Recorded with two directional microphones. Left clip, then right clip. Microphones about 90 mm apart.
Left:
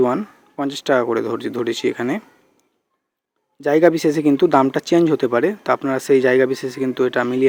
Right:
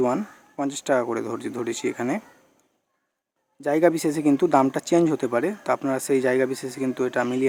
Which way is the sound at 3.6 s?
20° left (ahead or behind).